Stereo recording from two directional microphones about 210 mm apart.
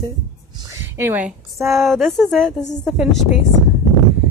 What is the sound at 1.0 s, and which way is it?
A woman's voice, 10° right (ahead or behind).